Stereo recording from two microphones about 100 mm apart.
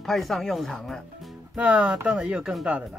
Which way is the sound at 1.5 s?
15° right (ahead or behind).